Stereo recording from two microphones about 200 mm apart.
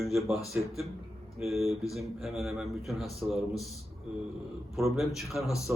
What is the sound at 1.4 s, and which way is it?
A man's voice, centre (ahead or behind).